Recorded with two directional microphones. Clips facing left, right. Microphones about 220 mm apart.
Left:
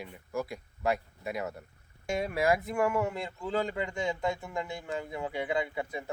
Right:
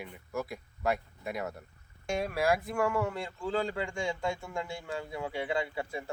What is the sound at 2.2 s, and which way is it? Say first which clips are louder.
Speech: left 1 dB; 20° left (ahead or behind).